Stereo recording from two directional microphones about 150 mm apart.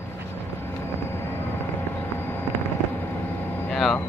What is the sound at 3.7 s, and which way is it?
Vehicle, centre (ahead or behind).